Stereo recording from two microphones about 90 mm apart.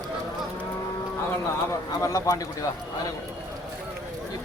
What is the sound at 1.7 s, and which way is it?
Speech, 35° left (ahead or behind).